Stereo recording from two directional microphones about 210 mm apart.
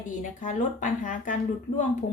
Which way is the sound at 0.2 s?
40° left (ahead or behind).